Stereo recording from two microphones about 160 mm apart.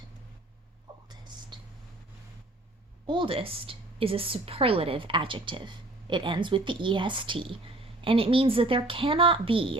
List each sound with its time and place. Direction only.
1.0 s whispering: 25° right (ahead or behind)
3.1 s a woman's voice: 30° right (ahead or behind)